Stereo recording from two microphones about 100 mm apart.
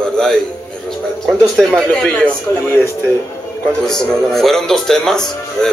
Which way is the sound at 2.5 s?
30° left (ahead or behind).